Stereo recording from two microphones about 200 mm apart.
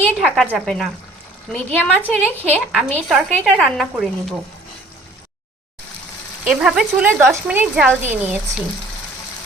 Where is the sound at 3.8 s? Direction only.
Centre (ahead or behind).